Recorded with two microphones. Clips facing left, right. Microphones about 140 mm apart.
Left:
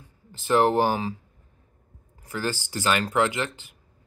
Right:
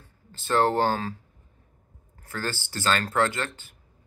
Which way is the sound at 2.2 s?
15° left (ahead or behind).